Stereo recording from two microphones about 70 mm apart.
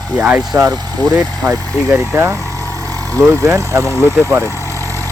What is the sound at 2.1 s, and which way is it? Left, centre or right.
Speech, right.